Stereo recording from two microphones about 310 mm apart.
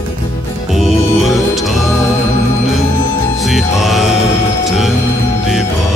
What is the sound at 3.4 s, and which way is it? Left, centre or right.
Music, centre.